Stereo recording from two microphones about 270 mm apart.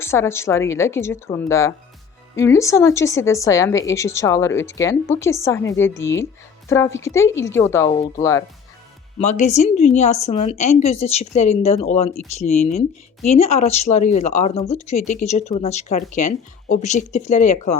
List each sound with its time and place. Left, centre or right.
0.0 s speech: centre
9.1 s speech: left